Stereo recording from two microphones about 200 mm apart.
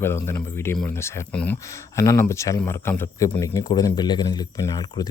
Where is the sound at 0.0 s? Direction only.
10° left (ahead or behind).